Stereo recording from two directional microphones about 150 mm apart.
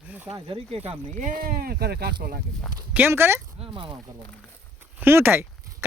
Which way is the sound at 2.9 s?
15° right (ahead or behind).